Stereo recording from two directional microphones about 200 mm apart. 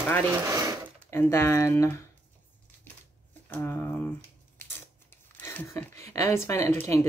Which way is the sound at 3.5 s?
10° left (ahead or behind).